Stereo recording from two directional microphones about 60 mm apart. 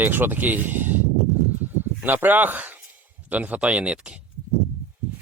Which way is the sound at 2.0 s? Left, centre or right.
Right.